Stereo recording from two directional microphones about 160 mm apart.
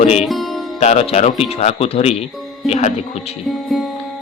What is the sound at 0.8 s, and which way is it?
Speech, 45° left (ahead or behind).